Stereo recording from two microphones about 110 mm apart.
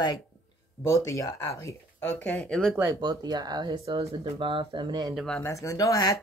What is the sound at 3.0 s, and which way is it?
Speech, 40° right (ahead or behind).